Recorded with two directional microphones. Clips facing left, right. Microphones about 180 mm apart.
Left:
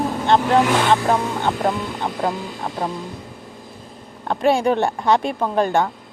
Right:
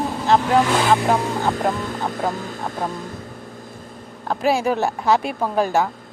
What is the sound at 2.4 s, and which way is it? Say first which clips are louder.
Speech: left 1 dB; 45° right (ahead or behind).